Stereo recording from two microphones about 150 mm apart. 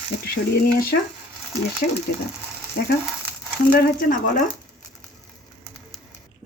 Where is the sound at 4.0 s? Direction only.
60° left (ahead or behind).